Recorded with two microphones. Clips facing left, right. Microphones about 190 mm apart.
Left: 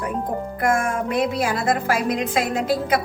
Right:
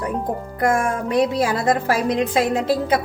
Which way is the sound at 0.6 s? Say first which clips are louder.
Right 2 dB; 35° right (ahead or behind).